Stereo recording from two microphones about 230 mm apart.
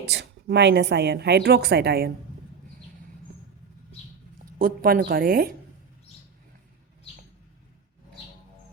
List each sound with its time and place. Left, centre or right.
0.0 s a woman's voice: right
4.5 s a woman's voice: right